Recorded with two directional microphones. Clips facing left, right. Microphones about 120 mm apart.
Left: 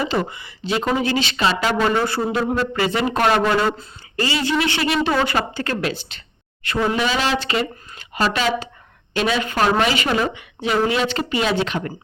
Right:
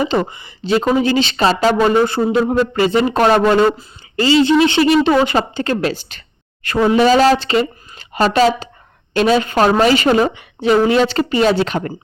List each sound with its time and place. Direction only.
0.0 s a woman's voice: 25° right (ahead or behind)
1.9 s a woman's voice: 20° right (ahead or behind)
5.9 s a sound: 45° right (ahead or behind)
6.9 s a woman's voice: 40° right (ahead or behind)
7.3 s a woman's voice: 30° right (ahead or behind)